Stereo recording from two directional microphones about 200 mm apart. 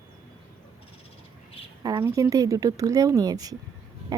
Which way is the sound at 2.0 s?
15° right (ahead or behind).